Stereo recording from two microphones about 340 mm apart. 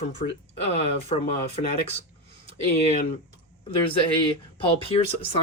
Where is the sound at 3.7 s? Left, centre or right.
Centre.